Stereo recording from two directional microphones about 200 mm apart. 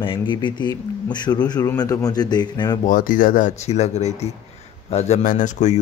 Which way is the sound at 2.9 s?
45° left (ahead or behind).